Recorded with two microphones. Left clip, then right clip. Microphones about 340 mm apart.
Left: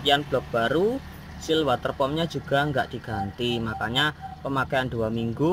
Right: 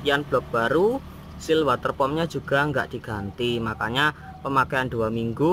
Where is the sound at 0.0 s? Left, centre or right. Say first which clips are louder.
Even; centre.